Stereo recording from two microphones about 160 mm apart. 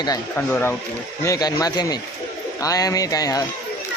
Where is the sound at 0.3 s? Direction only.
10° left (ahead or behind).